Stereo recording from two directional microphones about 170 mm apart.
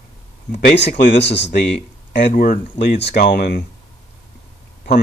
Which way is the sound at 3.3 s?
70° left (ahead or behind).